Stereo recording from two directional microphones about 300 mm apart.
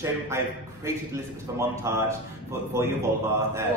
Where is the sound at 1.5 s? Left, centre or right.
Centre.